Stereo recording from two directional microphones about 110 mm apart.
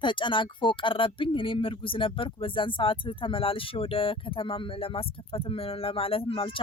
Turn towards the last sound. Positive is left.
turn(degrees=55)  # may be behind; listen again after turning